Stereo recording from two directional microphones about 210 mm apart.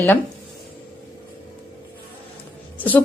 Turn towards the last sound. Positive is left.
turn(degrees=10)  # may be behind; listen again after turning